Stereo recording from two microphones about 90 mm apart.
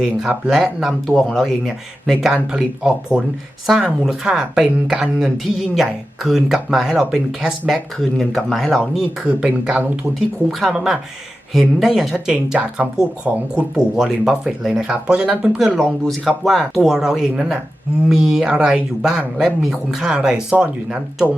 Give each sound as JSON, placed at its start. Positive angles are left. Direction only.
{"t": 0.0, "sound": "a woman's voice", "side_deg": -10}
{"t": 9.2, "sound": "a woman's voice", "side_deg": -15}